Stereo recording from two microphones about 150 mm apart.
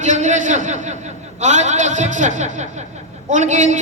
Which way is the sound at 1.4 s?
50° right (ahead or behind).